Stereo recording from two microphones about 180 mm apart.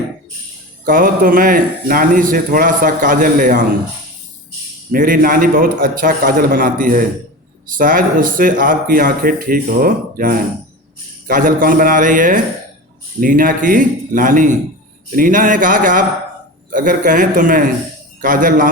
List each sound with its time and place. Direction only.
0.9 s speech: 50° right (ahead or behind)
4.9 s speech: 50° right (ahead or behind)